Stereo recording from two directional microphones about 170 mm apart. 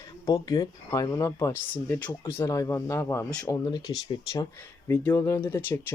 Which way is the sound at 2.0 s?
25° left (ahead or behind).